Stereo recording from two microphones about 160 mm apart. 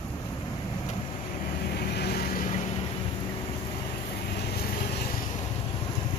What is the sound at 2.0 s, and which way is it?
Vehicle, 75° left (ahead or behind).